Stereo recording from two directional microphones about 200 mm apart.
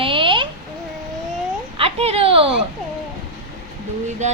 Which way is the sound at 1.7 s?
30° right (ahead or behind).